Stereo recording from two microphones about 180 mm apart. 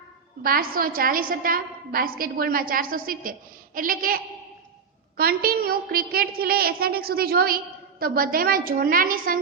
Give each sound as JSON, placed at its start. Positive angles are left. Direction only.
{"t": 0.4, "sound": "a woman's voice", "side_deg": -55}